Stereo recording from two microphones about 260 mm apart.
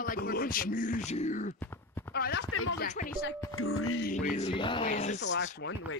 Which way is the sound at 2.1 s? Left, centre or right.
Left.